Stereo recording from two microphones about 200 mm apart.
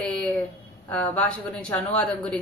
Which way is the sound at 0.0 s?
5° left (ahead or behind).